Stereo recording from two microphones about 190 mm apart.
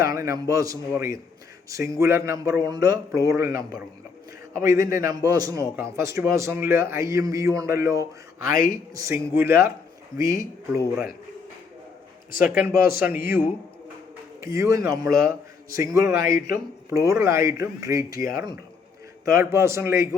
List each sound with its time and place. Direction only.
0.0 s a man's voice: 15° right (ahead or behind)
4.6 s a man's voice: 15° right (ahead or behind)
8.5 s a man's voice: 50° left (ahead or behind)
9.0 s a man's voice: 15° right (ahead or behind)
12.5 s a man's voice: 10° right (ahead or behind)
12.7 s a man's voice: 50° left (ahead or behind)
13.1 s a man's voice: 10° right (ahead or behind)
15.1 s a man's voice: 50° left (ahead or behind)
15.7 s a man's voice: 15° right (ahead or behind)
18.1 s a man's voice: 50° left (ahead or behind)
19.4 s a man's voice: 15° right (ahead or behind)